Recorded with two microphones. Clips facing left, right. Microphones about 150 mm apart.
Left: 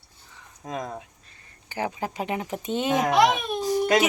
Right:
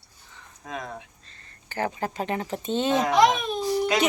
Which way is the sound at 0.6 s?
40° left (ahead or behind).